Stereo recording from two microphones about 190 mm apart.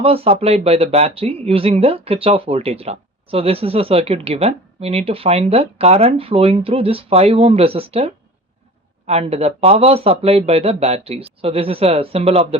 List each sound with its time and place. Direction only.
0.0 s speech: 30° right (ahead or behind)